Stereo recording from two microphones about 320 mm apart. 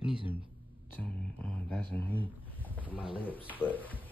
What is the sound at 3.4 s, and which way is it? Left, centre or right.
Music, centre.